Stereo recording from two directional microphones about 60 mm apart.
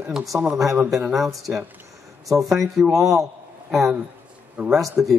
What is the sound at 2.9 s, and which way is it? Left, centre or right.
Speech, right.